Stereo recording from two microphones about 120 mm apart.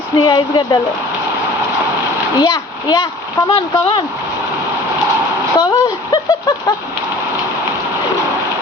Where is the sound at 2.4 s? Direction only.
35° left (ahead or behind).